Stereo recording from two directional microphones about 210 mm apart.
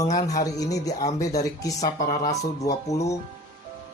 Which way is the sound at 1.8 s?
40° left (ahead or behind).